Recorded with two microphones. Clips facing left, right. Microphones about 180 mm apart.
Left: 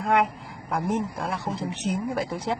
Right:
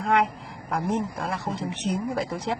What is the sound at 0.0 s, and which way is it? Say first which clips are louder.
A woman's voice: even; centre (ahead or behind).